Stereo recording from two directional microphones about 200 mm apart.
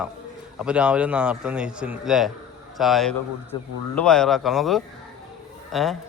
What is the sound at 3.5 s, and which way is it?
Speech, 25° left (ahead or behind).